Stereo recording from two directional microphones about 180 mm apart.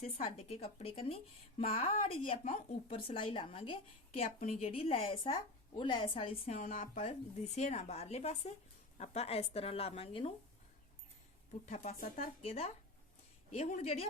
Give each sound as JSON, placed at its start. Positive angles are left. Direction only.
{"t": 0.0, "sound": "a woman's voice", "side_deg": 35}
{"t": 11.6, "sound": "a woman's voice", "side_deg": 40}